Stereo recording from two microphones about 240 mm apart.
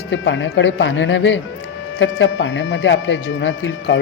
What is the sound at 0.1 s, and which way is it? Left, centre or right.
Speech, left.